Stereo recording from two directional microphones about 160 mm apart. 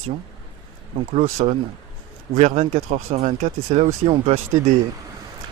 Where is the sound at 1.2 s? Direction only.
40° right (ahead or behind).